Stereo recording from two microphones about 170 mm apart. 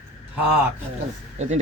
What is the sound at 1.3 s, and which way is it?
Speech, 40° right (ahead or behind).